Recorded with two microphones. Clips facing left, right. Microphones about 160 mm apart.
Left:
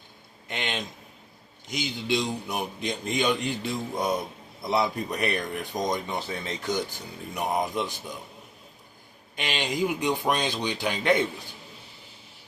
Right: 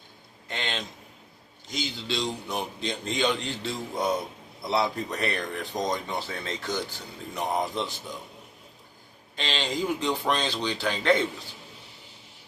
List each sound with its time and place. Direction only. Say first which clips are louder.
0.4 s speech: left 1 dB; 15° left (ahead or behind)
9.3 s speech: even; 15° left (ahead or behind)